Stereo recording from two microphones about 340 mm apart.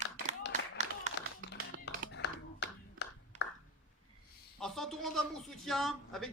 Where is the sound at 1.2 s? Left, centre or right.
Left.